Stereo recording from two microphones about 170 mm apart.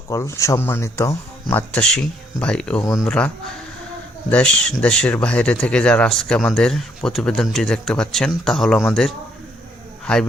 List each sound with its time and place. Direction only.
0.1 s speech: 20° left (ahead or behind)
2.8 s speech: 20° left (ahead or behind)
3.1 s speech: 5° left (ahead or behind)